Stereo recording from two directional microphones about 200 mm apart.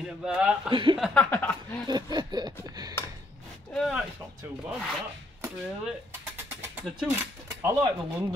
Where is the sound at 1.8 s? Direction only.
20° right (ahead or behind).